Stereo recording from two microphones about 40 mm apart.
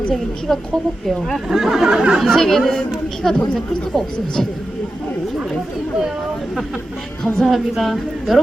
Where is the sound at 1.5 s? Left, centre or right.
Centre.